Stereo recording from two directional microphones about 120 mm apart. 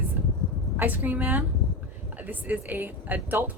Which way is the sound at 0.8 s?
15° right (ahead or behind).